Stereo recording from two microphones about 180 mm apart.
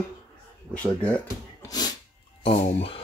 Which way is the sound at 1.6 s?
20° left (ahead or behind).